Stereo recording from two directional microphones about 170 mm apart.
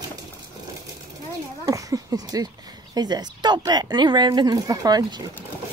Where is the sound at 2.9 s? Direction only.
25° right (ahead or behind).